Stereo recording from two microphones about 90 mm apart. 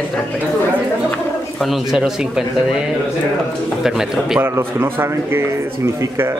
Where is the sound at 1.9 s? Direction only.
5° right (ahead or behind).